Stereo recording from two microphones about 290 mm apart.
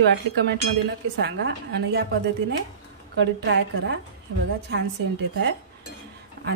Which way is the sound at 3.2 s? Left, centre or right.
Right.